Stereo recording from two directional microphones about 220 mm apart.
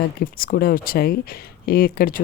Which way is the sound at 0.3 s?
40° left (ahead or behind).